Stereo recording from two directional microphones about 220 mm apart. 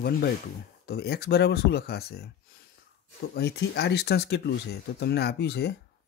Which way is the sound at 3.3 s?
50° left (ahead or behind).